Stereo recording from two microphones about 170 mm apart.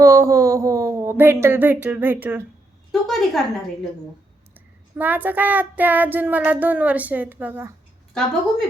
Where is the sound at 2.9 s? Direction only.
Centre (ahead or behind).